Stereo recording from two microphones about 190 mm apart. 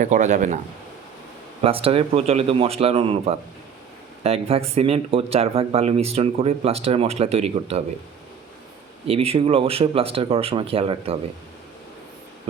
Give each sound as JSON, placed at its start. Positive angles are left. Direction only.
{"t": 0.0, "sound": "speech", "side_deg": -40}
{"t": 1.6, "sound": "speech", "side_deg": -30}
{"t": 9.0, "sound": "speech", "side_deg": -30}